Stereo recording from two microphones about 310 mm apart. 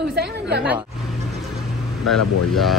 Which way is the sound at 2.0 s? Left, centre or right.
Centre.